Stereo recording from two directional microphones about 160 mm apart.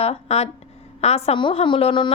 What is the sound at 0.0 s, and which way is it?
A woman's voice, 40° left (ahead or behind).